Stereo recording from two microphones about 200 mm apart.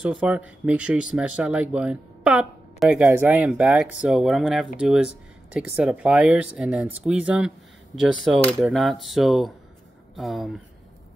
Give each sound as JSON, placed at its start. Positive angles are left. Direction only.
{"t": 0.0, "sound": "speech", "side_deg": -5}